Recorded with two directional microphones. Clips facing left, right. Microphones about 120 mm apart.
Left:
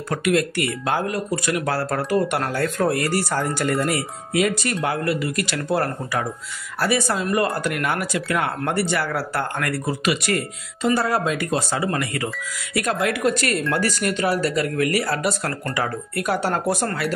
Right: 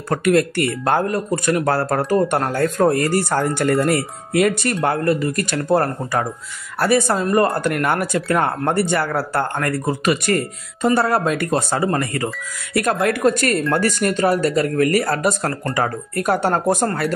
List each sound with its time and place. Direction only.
0.1 s speech: 45° right (ahead or behind)
3.3 s speech: 50° right (ahead or behind)
7.2 s speech: 35° right (ahead or behind)
7.6 s speech: 50° right (ahead or behind)